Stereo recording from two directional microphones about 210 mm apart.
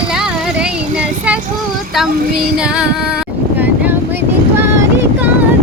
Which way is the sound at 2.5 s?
5° right (ahead or behind).